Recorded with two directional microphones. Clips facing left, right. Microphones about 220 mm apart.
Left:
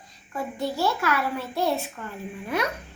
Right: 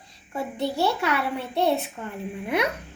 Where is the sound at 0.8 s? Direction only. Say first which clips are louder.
Even; 25° right (ahead or behind).